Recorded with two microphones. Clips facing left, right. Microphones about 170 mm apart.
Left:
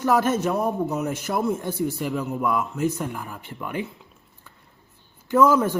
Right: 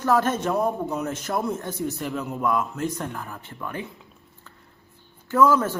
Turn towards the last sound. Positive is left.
turn(degrees=15)  # may be behind; listen again after turning